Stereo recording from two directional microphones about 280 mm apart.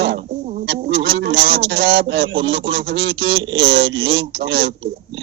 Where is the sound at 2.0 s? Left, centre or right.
Right.